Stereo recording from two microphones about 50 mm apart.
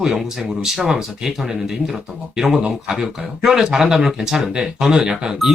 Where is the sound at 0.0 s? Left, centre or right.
Centre.